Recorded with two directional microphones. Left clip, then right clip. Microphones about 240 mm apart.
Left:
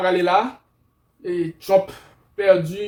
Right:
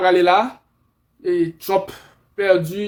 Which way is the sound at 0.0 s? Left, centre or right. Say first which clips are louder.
Right 3 dB; right.